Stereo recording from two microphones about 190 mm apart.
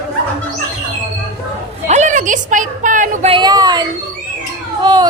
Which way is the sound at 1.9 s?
40° right (ahead or behind).